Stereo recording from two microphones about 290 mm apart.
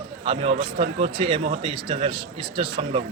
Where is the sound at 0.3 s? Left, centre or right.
Centre.